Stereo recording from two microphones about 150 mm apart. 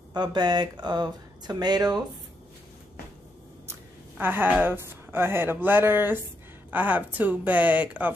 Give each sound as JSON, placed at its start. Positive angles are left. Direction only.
{"t": 0.1, "sound": "speech", "side_deg": -30}
{"t": 4.2, "sound": "a woman's voice", "side_deg": -15}